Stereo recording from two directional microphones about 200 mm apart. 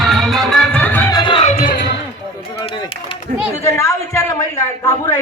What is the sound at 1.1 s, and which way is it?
Music, 25° left (ahead or behind).